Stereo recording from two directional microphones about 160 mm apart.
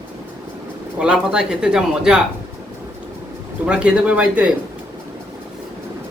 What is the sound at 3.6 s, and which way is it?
Speech, 5° right (ahead or behind).